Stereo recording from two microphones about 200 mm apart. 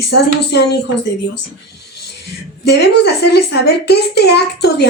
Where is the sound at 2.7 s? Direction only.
55° left (ahead or behind).